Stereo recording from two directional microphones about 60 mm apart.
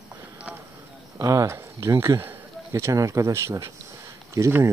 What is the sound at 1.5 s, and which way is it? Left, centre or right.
Speech, right.